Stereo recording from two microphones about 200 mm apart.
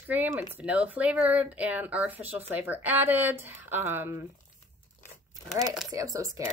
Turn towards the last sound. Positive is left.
turn(degrees=-15)  # may be behind; listen again after turning